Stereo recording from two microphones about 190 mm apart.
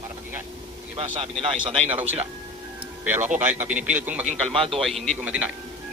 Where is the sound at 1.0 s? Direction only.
30° right (ahead or behind).